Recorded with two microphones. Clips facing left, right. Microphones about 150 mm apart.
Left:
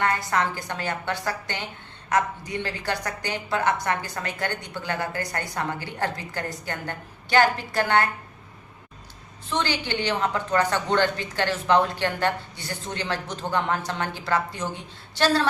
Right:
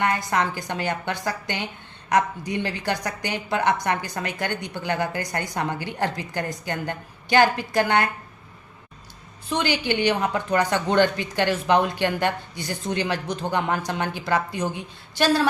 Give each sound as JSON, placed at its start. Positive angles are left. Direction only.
{"t": 0.0, "sound": "a woman's voice", "side_deg": -15}
{"t": 9.5, "sound": "a woman's voice", "side_deg": -15}